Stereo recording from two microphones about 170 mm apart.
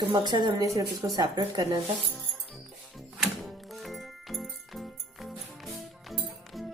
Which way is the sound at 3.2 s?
Centre (ahead or behind).